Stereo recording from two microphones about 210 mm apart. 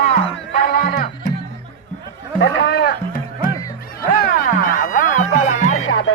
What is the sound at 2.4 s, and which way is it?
Sheep, 50° left (ahead or behind).